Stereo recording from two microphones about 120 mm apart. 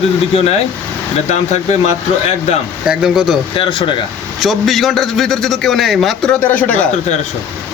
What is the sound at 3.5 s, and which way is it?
Speech, 45° left (ahead or behind).